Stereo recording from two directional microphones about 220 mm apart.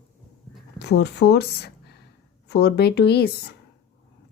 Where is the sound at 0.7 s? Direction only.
50° left (ahead or behind).